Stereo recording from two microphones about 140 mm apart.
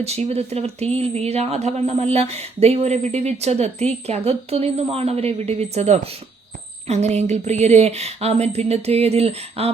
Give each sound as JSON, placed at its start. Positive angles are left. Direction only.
{"t": 0.0, "sound": "speech", "side_deg": -50}